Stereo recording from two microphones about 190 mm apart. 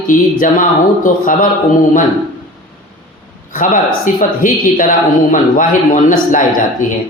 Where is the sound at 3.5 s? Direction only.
45° left (ahead or behind).